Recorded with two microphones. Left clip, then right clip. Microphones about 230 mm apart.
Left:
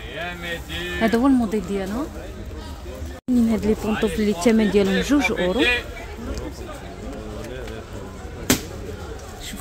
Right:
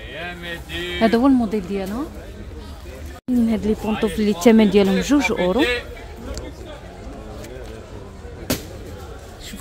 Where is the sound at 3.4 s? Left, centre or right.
Centre.